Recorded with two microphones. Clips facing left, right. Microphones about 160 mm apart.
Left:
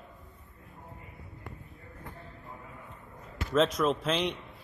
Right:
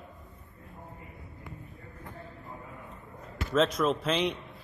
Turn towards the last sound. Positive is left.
turn(degrees=0)  # may be behind; listen again after turning